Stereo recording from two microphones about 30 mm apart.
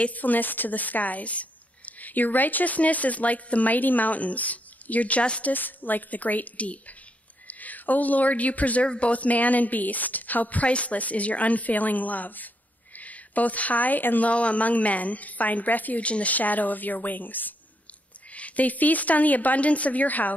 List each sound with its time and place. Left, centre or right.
0.1 s speech: left
5.5 s speech: left
7.4 s speech: left
8.8 s speech: left
9.1 s speech: left
10.7 s speech: left
14.2 s speech: left
16.0 s speech: left
16.3 s a woman's voice: left
18.3 s speech: left